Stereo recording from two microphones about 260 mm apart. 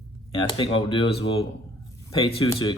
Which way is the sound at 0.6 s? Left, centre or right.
Centre.